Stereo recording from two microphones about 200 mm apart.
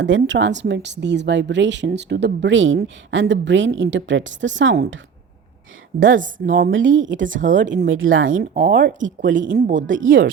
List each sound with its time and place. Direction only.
0.0 s speech: 70° right (ahead or behind)
6.0 s speech: 40° right (ahead or behind)
6.7 s speech: 70° right (ahead or behind)
7.3 s speech: 40° right (ahead or behind)
7.9 s speech: 85° right
8.2 s speech: 40° right (ahead or behind)
10.0 s speech: 70° right (ahead or behind)